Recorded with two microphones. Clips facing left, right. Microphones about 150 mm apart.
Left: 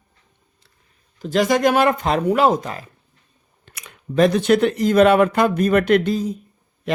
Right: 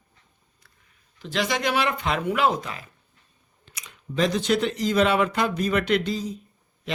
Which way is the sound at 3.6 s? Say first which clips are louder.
Left 4 dB; 55° left (ahead or behind).